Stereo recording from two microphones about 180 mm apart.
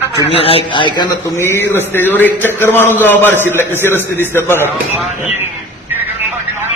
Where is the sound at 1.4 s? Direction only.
15° left (ahead or behind).